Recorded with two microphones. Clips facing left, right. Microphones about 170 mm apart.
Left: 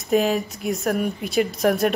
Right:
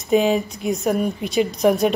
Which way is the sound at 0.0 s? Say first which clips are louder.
Right 3 dB; centre (ahead or behind).